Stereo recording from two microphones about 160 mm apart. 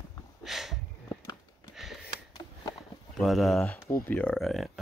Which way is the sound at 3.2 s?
Centre (ahead or behind).